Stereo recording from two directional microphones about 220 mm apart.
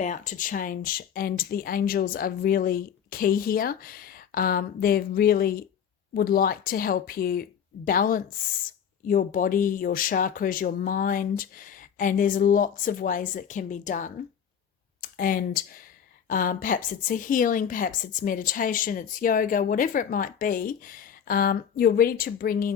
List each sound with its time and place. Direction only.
0.0 s a woman's voice: 35° left (ahead or behind)
15.1 s a woman's voice: 40° left (ahead or behind)